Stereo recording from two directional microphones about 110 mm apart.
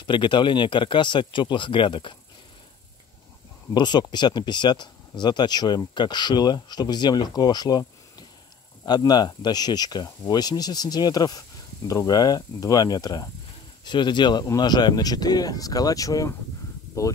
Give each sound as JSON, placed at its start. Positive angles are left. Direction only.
{"t": 0.0, "sound": "speech", "side_deg": 45}
{"t": 3.7, "sound": "speech", "side_deg": 40}